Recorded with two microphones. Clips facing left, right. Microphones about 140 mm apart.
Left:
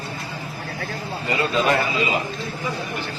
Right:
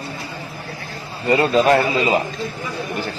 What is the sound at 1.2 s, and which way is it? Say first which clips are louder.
Speech: right 6 dB; 40° right (ahead or behind).